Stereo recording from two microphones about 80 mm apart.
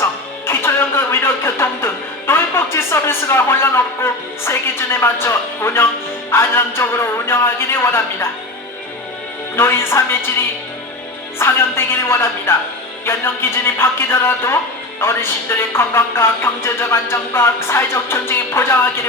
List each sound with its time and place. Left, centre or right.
0.0 s a man's voice: left
9.6 s a man's voice: left